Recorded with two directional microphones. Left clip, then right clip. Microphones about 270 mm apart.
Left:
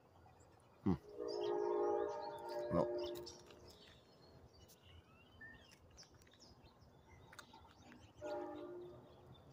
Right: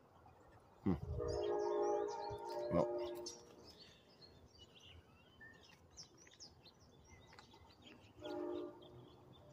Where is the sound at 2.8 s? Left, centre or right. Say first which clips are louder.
Right 1 dB; centre.